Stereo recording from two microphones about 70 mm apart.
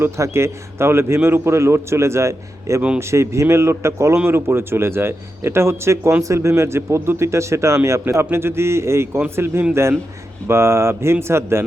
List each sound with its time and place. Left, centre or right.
0.0 s a man's voice: right